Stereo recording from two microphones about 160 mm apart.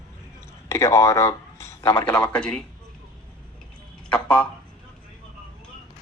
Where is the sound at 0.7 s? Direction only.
20° left (ahead or behind).